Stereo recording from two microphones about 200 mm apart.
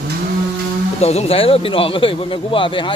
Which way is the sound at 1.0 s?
30° left (ahead or behind).